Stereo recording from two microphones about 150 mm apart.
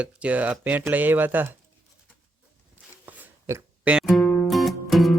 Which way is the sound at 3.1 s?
20° right (ahead or behind).